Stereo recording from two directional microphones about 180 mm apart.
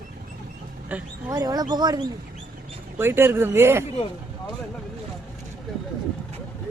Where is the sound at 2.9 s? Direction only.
15° right (ahead or behind).